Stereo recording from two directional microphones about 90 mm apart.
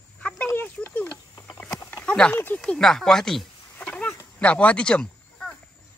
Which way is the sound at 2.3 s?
20° left (ahead or behind).